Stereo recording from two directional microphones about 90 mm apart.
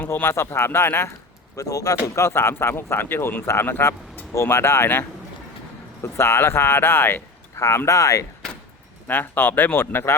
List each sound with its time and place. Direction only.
0.1 s speech: 25° left (ahead or behind)
1.5 s speech: 40° left (ahead or behind)
9.0 s speech: 20° left (ahead or behind)